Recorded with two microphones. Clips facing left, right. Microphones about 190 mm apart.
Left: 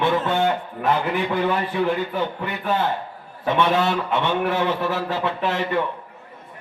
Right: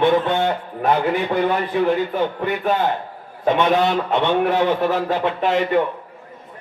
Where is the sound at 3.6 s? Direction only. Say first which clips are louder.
Right 1 dB; 20° right (ahead or behind).